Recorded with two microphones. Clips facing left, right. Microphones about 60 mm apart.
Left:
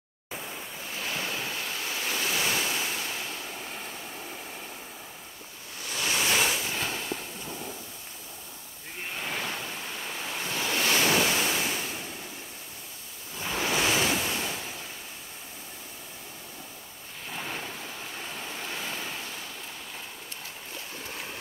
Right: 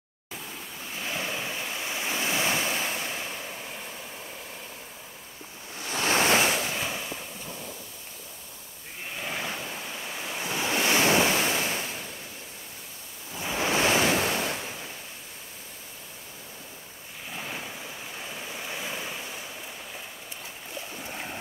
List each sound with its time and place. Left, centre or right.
0.3 s pink noise: centre
0.9 s waves: centre
5.8 s waves: right
6.8 s fireworks: centre
9.2 s waves: centre
13.4 s waves: centre
13.7 s waves: right
17.3 s ocean: centre
18.3 s waves: centre
21.0 s boat: centre